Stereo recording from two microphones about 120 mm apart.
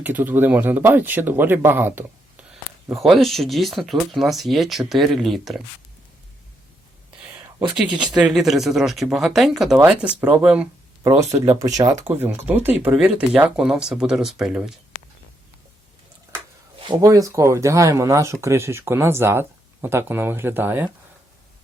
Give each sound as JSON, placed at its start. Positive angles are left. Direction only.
{"t": 0.0, "sound": "speech", "side_deg": -15}
{"t": 2.5, "sound": "speech", "side_deg": -5}
{"t": 7.8, "sound": "speech", "side_deg": -5}
{"t": 11.1, "sound": "speech", "side_deg": -25}
{"t": 12.0, "sound": "speech", "side_deg": -15}
{"t": 16.8, "sound": "speech", "side_deg": -40}
{"t": 17.1, "sound": "speech", "side_deg": -25}